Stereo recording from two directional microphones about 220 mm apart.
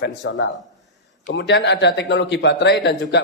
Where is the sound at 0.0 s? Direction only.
55° left (ahead or behind).